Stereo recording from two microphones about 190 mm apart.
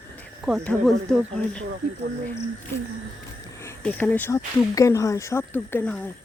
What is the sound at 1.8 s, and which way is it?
Speech, 55° right (ahead or behind).